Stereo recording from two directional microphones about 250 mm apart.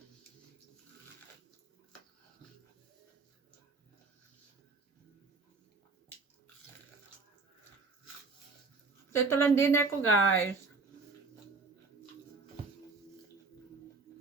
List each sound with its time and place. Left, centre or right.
9.1 s a woman's voice: centre
10.0 s a woman's voice: left